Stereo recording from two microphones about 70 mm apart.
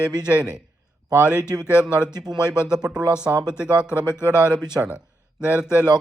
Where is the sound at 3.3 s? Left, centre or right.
Right.